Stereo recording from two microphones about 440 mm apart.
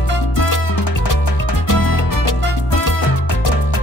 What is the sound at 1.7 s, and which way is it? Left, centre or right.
Music, left.